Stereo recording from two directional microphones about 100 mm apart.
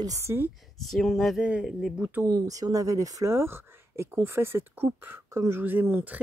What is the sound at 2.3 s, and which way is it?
Speech, 35° right (ahead or behind).